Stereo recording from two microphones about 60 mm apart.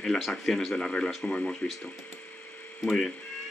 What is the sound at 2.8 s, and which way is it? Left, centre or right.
Speech, centre.